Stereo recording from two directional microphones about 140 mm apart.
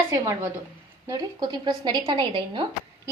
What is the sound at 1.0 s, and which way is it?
Speech, 30° right (ahead or behind).